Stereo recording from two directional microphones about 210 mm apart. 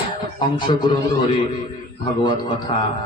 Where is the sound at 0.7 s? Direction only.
25° left (ahead or behind).